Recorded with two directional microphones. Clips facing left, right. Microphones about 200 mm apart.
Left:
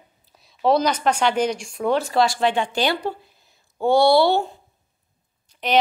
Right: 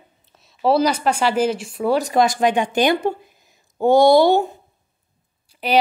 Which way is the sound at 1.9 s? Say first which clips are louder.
Right 3 dB; 15° right (ahead or behind).